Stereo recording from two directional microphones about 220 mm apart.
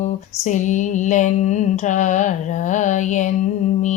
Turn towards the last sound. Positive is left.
turn(degrees=35)  # may be behind; listen again after turning